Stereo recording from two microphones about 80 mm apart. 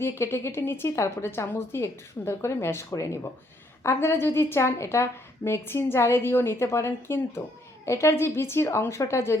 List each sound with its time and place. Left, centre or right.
0.0 s a woman's voice: left